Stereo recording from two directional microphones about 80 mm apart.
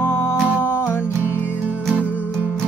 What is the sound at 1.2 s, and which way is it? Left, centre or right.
Music, right.